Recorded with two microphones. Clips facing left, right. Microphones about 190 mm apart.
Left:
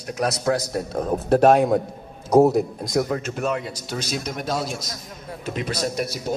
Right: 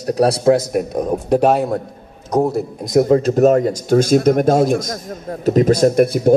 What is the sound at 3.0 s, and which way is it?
Speech, 35° right (ahead or behind).